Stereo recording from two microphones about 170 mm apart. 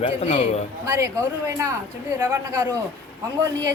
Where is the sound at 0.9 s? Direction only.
20° right (ahead or behind).